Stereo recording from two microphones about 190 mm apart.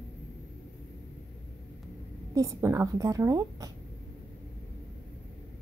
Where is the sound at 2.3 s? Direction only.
15° right (ahead or behind).